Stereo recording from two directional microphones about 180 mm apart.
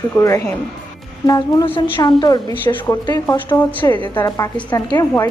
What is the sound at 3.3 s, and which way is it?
A woman's voice, 10° left (ahead or behind).